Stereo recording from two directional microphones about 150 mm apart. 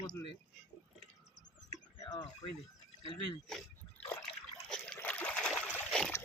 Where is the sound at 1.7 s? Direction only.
25° left (ahead or behind).